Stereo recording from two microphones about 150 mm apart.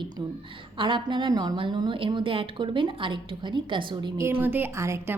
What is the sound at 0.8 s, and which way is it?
A woman's voice, 30° right (ahead or behind).